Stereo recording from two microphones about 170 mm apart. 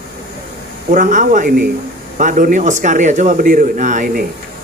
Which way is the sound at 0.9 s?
50° right (ahead or behind).